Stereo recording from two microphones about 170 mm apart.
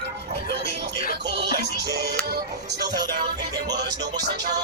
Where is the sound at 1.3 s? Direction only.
80° right.